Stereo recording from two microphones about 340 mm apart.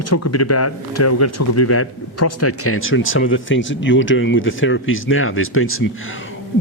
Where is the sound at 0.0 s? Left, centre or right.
Left.